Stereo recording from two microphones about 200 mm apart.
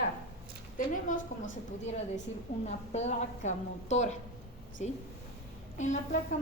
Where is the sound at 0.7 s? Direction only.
40° left (ahead or behind).